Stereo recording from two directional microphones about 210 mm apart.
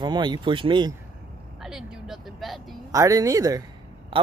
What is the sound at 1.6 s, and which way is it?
Speech, 5° right (ahead or behind).